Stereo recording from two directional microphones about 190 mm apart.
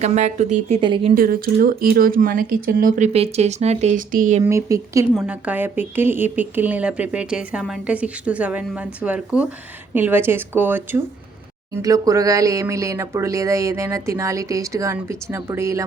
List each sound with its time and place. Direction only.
0.0 s speech: 35° right (ahead or behind)
0.8 s speech: 25° right (ahead or behind)
1.1 s speech: 50° right (ahead or behind)
4.4 s speech: 15° right (ahead or behind)